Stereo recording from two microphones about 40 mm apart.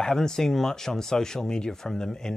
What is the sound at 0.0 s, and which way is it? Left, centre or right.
Speech, centre.